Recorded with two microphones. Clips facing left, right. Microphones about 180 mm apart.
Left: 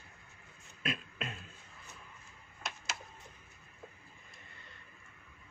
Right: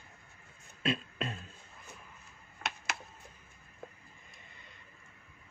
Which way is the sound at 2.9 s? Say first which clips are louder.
Right 3 dB; 60° right (ahead or behind).